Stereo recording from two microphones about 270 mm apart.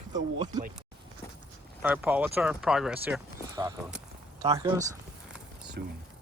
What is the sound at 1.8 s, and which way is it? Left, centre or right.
Speech, centre.